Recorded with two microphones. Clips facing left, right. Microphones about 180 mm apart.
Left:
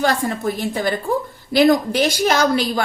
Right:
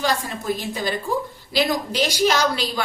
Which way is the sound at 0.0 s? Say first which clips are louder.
Left 5 dB; 55° left (ahead or behind).